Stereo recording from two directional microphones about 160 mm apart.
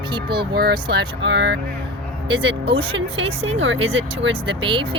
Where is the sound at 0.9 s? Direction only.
90° right.